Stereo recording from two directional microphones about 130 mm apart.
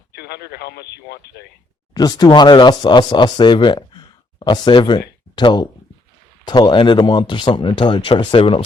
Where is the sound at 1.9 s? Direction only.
30° left (ahead or behind).